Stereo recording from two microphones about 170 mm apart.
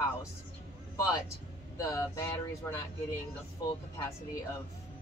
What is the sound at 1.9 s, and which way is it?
Speech, 15° left (ahead or behind).